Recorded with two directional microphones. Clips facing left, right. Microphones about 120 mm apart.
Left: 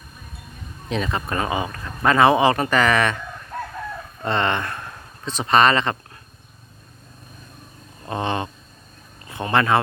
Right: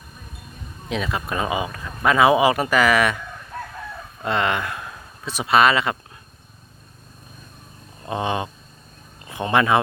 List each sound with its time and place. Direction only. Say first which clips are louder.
0.9 s speech: left 1 dB; centre (ahead or behind)
4.2 s speech: even; 5° right (ahead or behind)
8.0 s speech: even; 15° right (ahead or behind)